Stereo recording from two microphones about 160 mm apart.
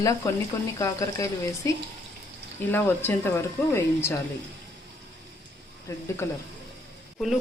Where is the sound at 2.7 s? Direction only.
15° left (ahead or behind).